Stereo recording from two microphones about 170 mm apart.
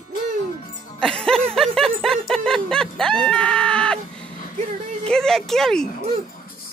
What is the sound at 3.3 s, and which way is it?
Screaming, 5° left (ahead or behind).